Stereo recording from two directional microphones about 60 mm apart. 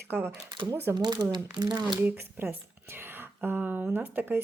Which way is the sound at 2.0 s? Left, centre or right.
Right.